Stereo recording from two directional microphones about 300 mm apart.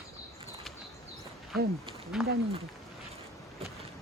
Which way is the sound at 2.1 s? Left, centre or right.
Centre.